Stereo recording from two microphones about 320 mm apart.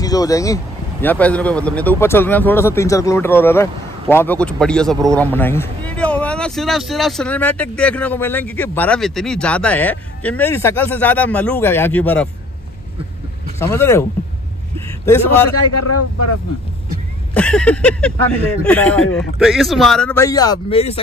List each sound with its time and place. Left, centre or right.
0.0 s speech: centre
13.6 s speech: centre
15.7 s speech: left
17.3 s speech: centre